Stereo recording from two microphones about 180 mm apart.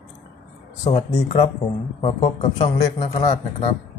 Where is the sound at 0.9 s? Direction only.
35° left (ahead or behind).